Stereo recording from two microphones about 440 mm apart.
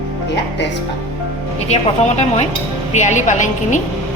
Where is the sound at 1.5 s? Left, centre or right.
Centre.